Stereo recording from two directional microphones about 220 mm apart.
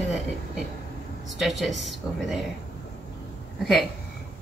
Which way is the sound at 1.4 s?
Centre (ahead or behind).